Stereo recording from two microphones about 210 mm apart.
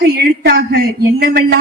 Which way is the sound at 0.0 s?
50° right (ahead or behind).